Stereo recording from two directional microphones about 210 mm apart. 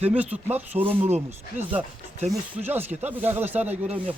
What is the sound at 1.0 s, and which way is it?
Speech, 30° right (ahead or behind).